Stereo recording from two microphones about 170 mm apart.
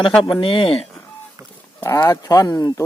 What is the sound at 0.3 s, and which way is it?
Speech, 30° left (ahead or behind).